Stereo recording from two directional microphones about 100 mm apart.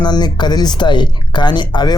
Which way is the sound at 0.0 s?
45° left (ahead or behind).